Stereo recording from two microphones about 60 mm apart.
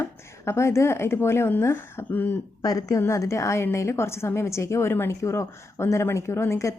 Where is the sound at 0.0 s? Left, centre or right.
Left.